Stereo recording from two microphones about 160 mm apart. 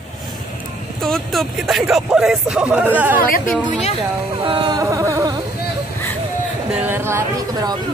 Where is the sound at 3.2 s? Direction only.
60° left (ahead or behind).